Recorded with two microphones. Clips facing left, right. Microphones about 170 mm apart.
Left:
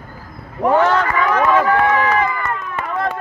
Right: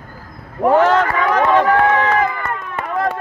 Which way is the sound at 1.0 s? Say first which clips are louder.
Right 1 dB; 50° right (ahead or behind).